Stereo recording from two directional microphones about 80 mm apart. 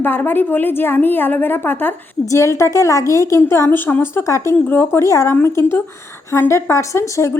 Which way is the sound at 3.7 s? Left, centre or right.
Left.